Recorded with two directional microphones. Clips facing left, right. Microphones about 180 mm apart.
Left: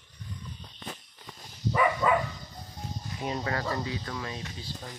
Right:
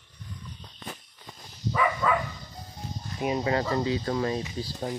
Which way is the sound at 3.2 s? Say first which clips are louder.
Right 6 dB; 15° right (ahead or behind).